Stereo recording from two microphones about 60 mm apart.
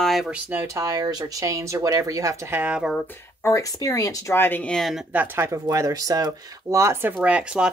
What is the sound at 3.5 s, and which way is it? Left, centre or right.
Speech, left.